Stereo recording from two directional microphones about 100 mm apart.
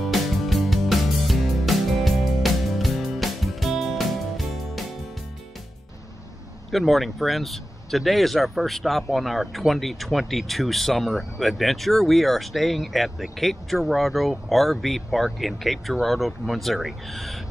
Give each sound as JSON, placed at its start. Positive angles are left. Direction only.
{"t": 0.0, "sound": "music", "side_deg": 0}
{"t": 6.7, "sound": "speech", "side_deg": 0}